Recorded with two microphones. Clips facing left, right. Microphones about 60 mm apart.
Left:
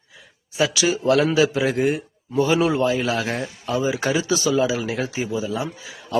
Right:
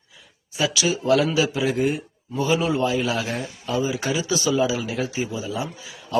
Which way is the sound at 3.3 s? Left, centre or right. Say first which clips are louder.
Left 1 dB; left.